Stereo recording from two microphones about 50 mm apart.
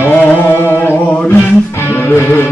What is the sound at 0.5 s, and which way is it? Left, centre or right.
Music, left.